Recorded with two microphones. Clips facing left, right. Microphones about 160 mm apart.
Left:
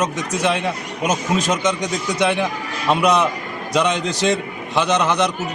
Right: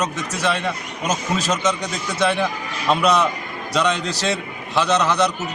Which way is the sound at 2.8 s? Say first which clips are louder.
Left 1 dB; 15° left (ahead or behind).